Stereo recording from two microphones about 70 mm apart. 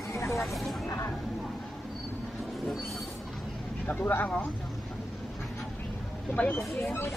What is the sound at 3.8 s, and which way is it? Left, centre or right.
Speech, left.